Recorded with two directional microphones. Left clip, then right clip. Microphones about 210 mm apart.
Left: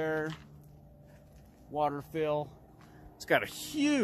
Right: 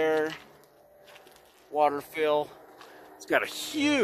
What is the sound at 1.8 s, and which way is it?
Speech, 5° right (ahead or behind).